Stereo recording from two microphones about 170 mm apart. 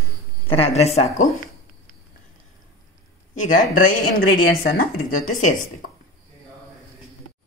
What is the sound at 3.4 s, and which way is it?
Speech, 50° left (ahead or behind).